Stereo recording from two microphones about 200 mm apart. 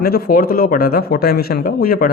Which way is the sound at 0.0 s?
50° left (ahead or behind).